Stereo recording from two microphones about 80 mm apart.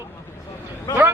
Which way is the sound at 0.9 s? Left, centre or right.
Left.